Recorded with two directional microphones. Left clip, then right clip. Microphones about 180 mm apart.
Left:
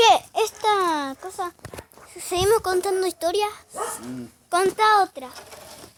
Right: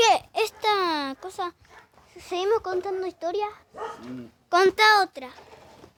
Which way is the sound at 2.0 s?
Centre (ahead or behind).